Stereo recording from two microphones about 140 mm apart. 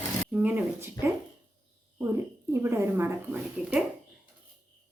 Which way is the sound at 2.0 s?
20° right (ahead or behind).